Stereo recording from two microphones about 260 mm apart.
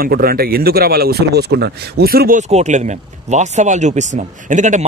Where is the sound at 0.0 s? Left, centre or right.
Right.